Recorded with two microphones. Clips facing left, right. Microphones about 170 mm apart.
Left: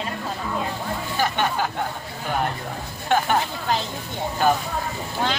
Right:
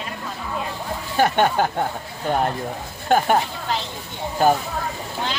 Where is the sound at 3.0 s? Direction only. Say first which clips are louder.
Right 3 dB; 45° right (ahead or behind).